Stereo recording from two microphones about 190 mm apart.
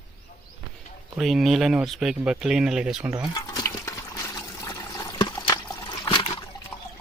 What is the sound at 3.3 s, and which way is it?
Water, 20° left (ahead or behind).